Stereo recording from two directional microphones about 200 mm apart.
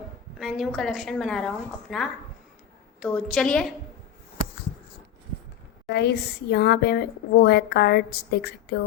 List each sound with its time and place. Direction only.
0.3 s a woman's voice: centre (ahead or behind)
5.9 s a woman's voice: 55° left (ahead or behind)